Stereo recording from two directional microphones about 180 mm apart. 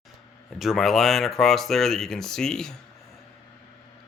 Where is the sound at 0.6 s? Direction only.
Centre (ahead or behind).